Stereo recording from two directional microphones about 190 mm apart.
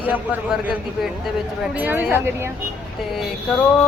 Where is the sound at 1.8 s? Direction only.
10° right (ahead or behind).